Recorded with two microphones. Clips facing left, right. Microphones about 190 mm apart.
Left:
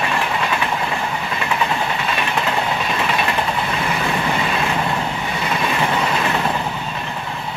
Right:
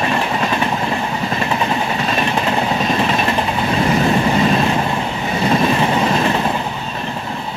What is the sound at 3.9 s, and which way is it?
Train, 35° right (ahead or behind).